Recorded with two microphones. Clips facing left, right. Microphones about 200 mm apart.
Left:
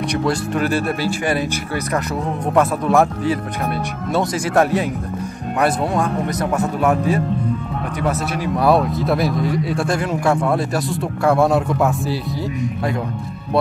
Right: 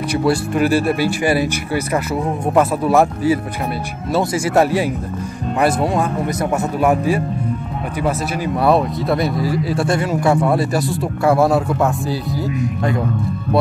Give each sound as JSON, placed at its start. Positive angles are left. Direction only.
{"t": 0.1, "sound": "speech", "side_deg": -10}
{"t": 2.5, "sound": "speech", "side_deg": -5}
{"t": 6.8, "sound": "speech", "side_deg": -10}
{"t": 8.6, "sound": "speech", "side_deg": 0}